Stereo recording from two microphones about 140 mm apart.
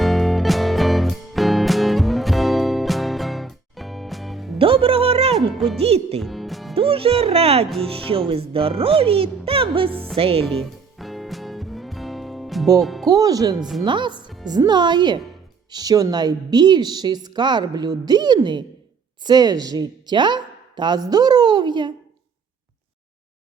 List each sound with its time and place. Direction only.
0.0 s music: centre (ahead or behind)
4.5 s music: 40° right (ahead or behind)
5.7 s speech: 45° right (ahead or behind)
6.1 s speech: centre (ahead or behind)
6.7 s a woman's voice: 40° right (ahead or behind)
10.4 s music: 5° left (ahead or behind)
12.8 s speech: centre (ahead or behind)
13.1 s a woman's voice: 25° right (ahead or behind)